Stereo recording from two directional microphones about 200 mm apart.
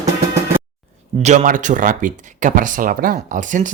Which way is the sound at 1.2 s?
35° right (ahead or behind).